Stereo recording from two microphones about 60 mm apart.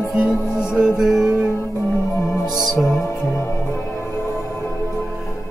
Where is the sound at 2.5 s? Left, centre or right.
Centre.